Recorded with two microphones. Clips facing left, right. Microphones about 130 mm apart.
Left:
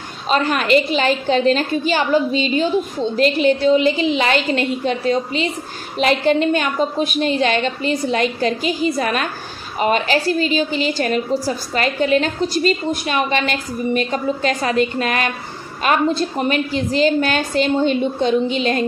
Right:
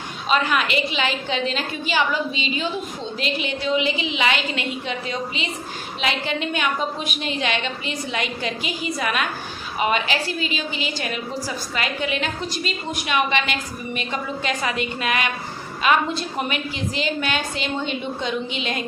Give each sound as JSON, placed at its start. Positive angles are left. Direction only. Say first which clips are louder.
{"t": 0.3, "sound": "a woman's voice", "louder": "left 5 dB", "side_deg": 40}